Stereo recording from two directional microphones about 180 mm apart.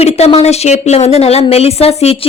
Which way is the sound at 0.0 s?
35° left (ahead or behind).